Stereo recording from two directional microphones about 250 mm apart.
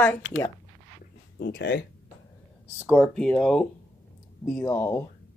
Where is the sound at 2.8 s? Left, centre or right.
Centre.